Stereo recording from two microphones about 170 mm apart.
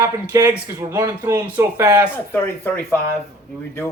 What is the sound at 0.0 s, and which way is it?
Speech, 15° right (ahead or behind).